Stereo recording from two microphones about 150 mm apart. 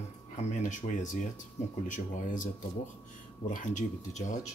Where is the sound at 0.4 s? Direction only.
55° left (ahead or behind).